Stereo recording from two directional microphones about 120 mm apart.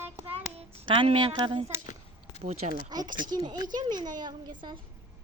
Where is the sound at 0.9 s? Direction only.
50° right (ahead or behind).